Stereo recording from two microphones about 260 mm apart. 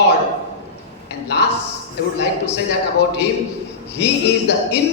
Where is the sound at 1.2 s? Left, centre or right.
Left.